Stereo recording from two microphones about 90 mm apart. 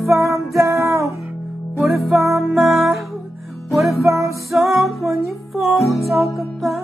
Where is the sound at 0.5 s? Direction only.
35° right (ahead or behind).